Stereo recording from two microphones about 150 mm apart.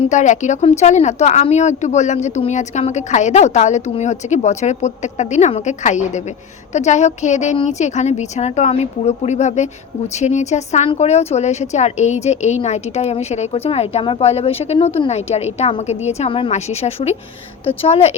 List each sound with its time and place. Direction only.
0.1 s speech: 55° left (ahead or behind)